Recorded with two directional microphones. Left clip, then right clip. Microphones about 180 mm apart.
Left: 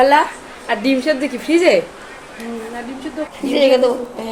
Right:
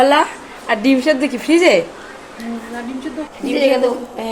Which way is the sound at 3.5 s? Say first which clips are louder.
Left 2 dB; 25° left (ahead or behind).